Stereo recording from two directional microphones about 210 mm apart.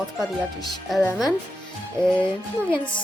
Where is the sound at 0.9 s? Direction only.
Centre (ahead or behind).